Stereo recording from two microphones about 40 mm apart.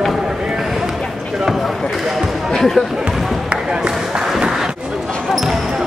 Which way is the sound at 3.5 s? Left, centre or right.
Right.